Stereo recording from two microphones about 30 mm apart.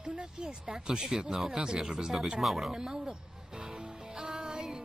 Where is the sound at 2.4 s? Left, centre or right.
Centre.